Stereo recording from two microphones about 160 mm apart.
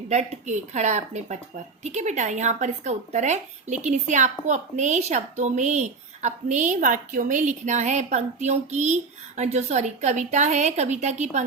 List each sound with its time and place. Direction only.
0.1 s a woman's voice: 45° right (ahead or behind)